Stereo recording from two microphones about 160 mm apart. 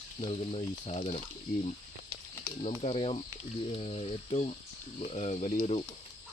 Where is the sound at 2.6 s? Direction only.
40° left (ahead or behind).